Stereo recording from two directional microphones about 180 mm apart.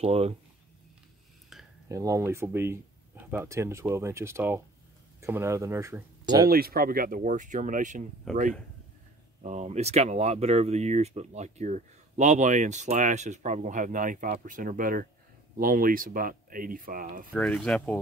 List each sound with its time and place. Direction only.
0.0 s speech: 35° right (ahead or behind)
1.9 s speech: 15° right (ahead or behind)
6.5 s speech: 55° right (ahead or behind)
8.3 s speech: centre (ahead or behind)
9.4 s speech: 40° right (ahead or behind)
17.3 s speech: 10° left (ahead or behind)